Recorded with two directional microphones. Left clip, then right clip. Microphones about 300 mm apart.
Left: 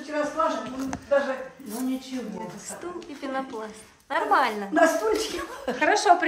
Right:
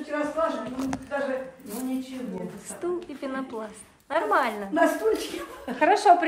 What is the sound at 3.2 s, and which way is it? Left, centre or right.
A woman's voice, centre.